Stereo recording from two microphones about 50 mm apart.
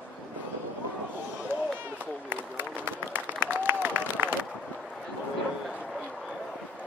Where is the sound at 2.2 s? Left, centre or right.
Right.